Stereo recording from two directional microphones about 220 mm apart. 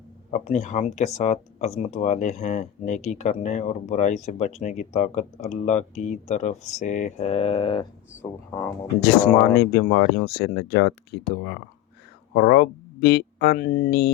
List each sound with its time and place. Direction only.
0.3 s speech: 30° left (ahead or behind)
9.6 s speech: 45° left (ahead or behind)